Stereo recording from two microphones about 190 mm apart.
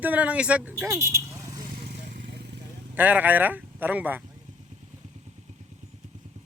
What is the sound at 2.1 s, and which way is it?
Vehicle, 55° right (ahead or behind).